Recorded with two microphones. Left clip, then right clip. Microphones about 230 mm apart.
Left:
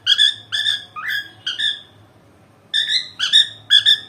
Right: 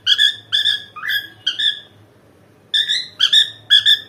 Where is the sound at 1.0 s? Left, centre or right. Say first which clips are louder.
Right 3 dB; centre.